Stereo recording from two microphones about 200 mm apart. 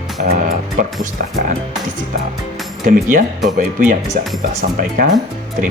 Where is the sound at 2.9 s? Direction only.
40° right (ahead or behind).